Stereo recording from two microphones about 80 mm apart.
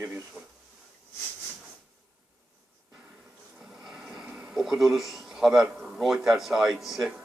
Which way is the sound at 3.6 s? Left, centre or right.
Centre.